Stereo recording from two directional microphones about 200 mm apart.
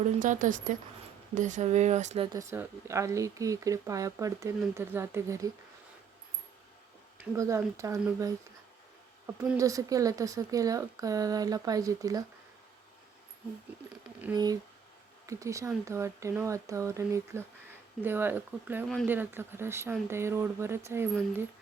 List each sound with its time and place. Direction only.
0.2 s speech: 40° right (ahead or behind)
2.4 s speech: 15° right (ahead or behind)
7.3 s speech: 15° right (ahead or behind)
13.9 s a sound: 10° right (ahead or behind)
14.3 s speech: 20° right (ahead or behind)